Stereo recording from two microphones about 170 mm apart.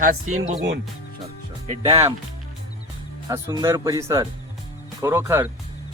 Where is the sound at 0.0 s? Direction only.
45° right (ahead or behind).